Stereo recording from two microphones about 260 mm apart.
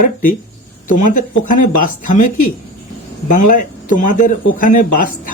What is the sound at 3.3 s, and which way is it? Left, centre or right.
Speech, left.